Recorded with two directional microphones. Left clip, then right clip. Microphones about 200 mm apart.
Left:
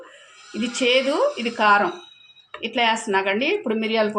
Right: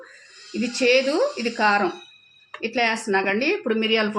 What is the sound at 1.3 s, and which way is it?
Speech, 35° right (ahead or behind).